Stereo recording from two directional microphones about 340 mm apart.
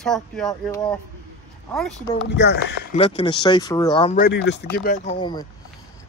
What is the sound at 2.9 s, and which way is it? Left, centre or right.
Speech, centre.